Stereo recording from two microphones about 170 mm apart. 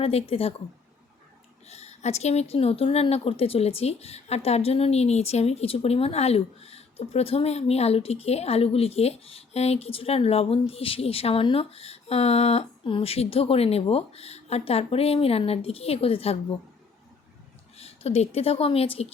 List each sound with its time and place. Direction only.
0.0 s speech: 35° left (ahead or behind)
1.6 s speech: 40° left (ahead or behind)
17.7 s a woman's voice: 35° left (ahead or behind)